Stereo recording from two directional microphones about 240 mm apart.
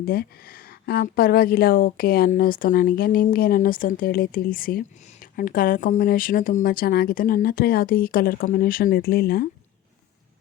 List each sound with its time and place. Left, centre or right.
0.0 s speech: left